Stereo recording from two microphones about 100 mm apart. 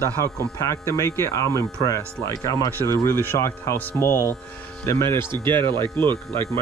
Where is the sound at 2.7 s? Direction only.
20° left (ahead or behind).